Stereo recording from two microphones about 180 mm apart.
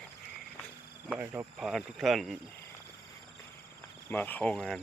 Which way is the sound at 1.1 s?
10° right (ahead or behind).